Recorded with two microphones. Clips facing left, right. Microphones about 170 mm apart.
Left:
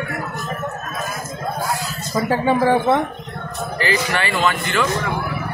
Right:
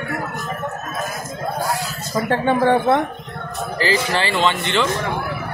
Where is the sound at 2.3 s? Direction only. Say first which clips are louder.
Even; 5° left (ahead or behind).